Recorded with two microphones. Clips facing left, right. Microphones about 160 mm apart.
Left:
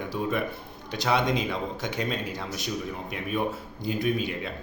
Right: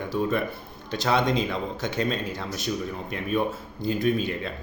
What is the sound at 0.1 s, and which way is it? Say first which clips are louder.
Speech: right 3 dB; 10° left (ahead or behind).